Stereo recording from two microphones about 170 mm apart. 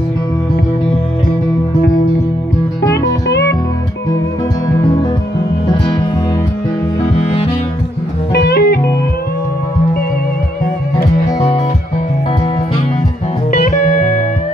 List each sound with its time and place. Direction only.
8.3 s music: 75° left (ahead or behind)
13.5 s music: 50° left (ahead or behind)